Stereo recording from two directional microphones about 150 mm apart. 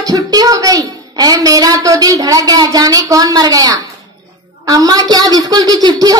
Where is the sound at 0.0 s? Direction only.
25° right (ahead or behind).